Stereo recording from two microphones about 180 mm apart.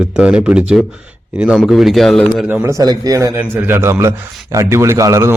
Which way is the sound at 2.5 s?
15° right (ahead or behind).